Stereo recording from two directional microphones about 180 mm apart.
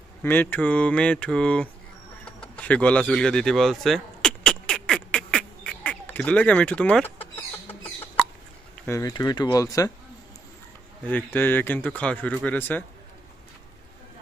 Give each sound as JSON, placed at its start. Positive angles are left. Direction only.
{"t": 0.2, "sound": "a man's voice", "side_deg": 10}
{"t": 2.2, "sound": "a sound", "side_deg": 5}
{"t": 8.8, "sound": "speech", "side_deg": 15}
{"t": 11.3, "sound": "a man's voice", "side_deg": 10}